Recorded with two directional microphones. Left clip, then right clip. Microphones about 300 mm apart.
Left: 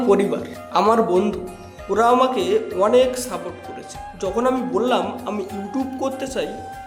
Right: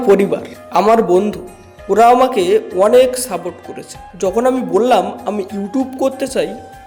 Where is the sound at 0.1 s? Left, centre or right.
Centre.